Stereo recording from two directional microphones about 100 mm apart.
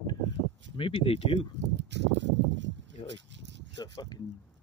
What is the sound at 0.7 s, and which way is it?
Speech, 60° left (ahead or behind).